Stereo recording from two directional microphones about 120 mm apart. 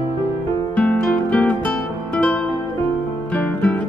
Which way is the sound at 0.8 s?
15° left (ahead or behind).